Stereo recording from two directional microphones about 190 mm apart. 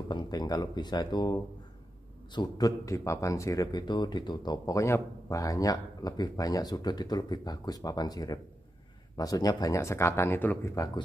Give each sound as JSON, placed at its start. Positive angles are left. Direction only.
{"t": 0.1, "sound": "a man's voice", "side_deg": 20}